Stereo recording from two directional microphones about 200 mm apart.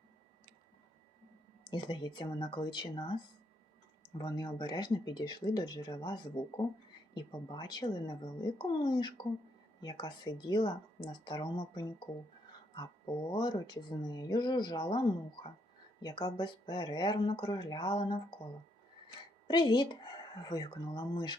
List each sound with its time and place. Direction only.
1.7 s speech: 25° left (ahead or behind)
4.2 s speech: 20° left (ahead or behind)
13.3 s speech: 20° left (ahead or behind)
19.5 s speech: 20° left (ahead or behind)